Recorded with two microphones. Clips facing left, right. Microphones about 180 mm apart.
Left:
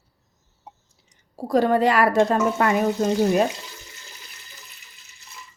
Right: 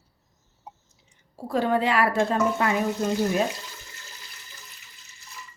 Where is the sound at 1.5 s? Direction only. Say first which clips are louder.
Left 5 dB; 40° left (ahead or behind).